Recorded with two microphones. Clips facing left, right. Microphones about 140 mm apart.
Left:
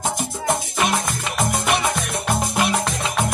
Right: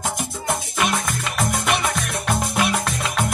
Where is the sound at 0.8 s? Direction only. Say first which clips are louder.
Left 1 dB; centre (ahead or behind).